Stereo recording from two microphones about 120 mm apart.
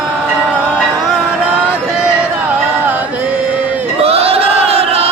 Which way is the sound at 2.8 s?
15° right (ahead or behind).